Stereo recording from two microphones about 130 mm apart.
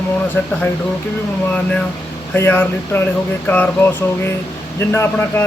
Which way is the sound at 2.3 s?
15° left (ahead or behind).